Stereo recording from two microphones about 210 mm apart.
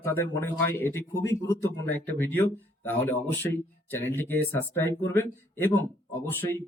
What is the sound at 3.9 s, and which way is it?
Speech, 10° left (ahead or behind).